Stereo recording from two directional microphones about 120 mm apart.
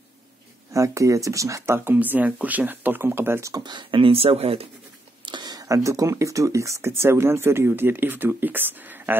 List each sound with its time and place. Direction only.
0.7 s speech: 25° right (ahead or behind)
3.6 s speech: 40° right (ahead or behind)
5.2 s a sound: 35° right (ahead or behind)
5.9 s speech: 25° right (ahead or behind)